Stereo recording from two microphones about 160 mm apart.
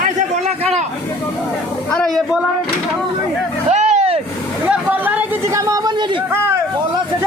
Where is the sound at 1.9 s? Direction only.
5° left (ahead or behind).